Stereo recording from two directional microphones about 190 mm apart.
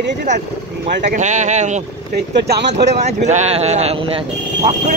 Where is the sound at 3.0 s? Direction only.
35° right (ahead or behind).